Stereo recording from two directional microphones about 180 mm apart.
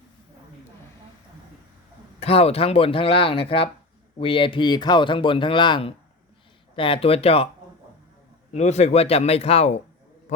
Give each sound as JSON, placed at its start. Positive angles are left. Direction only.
{"t": 2.2, "sound": "speech", "side_deg": 35}
{"t": 8.5, "sound": "speech", "side_deg": 40}